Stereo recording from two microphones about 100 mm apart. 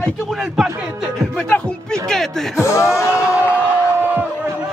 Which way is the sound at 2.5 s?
30° left (ahead or behind).